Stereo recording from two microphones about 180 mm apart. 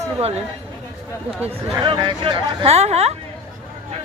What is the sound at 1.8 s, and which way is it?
Speech, 25° right (ahead or behind).